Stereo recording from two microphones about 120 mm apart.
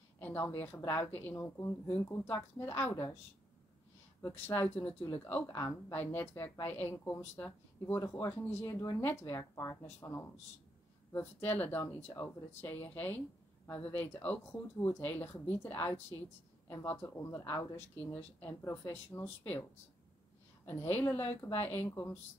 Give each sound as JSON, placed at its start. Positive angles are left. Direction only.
{"t": 0.2, "sound": "a woman's voice", "side_deg": 15}
{"t": 4.2, "sound": "speech", "side_deg": 15}
{"t": 18.0, "sound": "speech", "side_deg": 15}
{"t": 20.6, "sound": "speech", "side_deg": 20}